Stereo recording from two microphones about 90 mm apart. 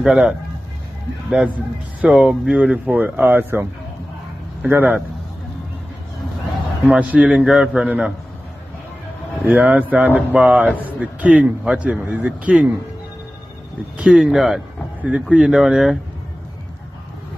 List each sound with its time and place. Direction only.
0.0 s a man's voice: 5° right (ahead or behind)
2.1 s a man's voice: 10° right (ahead or behind)
4.6 s speech: 20° right (ahead or behind)
6.9 s a man's voice: 15° right (ahead or behind)
9.4 s a man's voice: 15° right (ahead or behind)
13.9 s a man's voice: 10° right (ahead or behind)
15.0 s a man's voice: 15° right (ahead or behind)